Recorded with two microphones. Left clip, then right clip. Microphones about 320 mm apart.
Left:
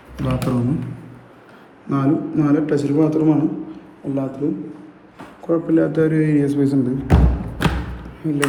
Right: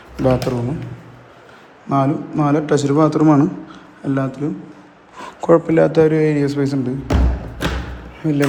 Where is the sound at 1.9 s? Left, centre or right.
Centre.